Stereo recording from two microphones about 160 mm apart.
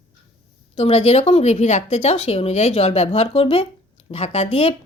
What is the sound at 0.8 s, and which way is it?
Speech, 40° left (ahead or behind).